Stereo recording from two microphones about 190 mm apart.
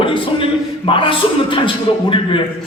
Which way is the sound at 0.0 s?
25° left (ahead or behind).